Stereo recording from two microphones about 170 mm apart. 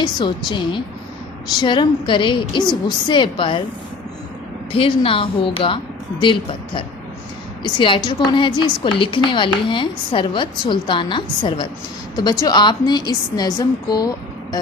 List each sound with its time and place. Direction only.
0.0 s a woman's voice: 25° left (ahead or behind)
4.7 s a woman's voice: 30° left (ahead or behind)